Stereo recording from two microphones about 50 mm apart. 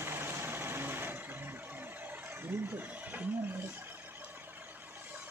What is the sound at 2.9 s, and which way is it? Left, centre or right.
Speech, right.